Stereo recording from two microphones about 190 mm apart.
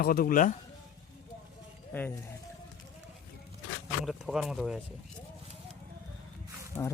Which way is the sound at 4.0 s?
Centre (ahead or behind).